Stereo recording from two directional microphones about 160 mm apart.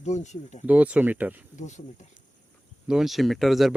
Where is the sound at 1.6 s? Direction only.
50° left (ahead or behind).